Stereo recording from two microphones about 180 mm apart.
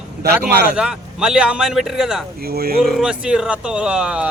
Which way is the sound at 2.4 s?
55° right (ahead or behind).